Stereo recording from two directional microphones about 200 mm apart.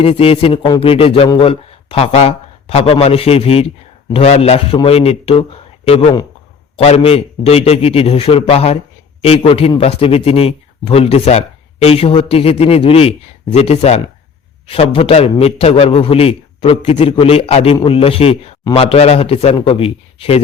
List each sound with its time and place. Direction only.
0.0 s speech: 30° left (ahead or behind)